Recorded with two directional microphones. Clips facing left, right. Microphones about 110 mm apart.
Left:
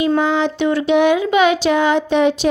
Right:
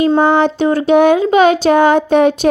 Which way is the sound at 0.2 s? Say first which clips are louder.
Right 5 dB; 50° right (ahead or behind).